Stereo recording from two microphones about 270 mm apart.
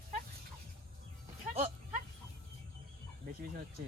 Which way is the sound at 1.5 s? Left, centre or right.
Right.